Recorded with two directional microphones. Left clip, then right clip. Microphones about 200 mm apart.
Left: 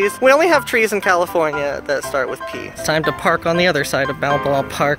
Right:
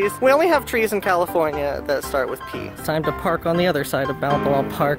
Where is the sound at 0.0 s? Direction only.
5° right (ahead or behind).